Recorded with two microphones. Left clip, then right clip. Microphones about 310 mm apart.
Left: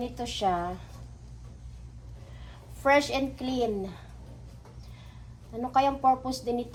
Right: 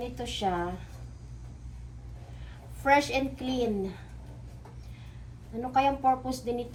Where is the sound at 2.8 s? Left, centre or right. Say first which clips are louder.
Left 1 dB; centre.